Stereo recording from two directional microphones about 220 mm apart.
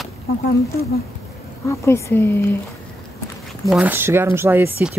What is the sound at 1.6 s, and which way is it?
Speech, 15° left (ahead or behind).